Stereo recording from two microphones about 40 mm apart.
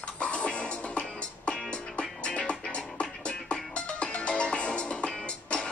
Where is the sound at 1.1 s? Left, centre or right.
Left.